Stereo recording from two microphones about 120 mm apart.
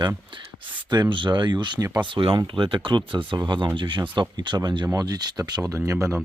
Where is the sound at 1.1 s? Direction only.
40° right (ahead or behind).